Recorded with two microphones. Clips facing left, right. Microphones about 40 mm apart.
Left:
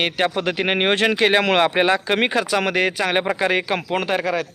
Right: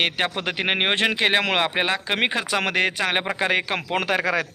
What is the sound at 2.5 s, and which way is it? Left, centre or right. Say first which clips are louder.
Speech: left 2 dB; right.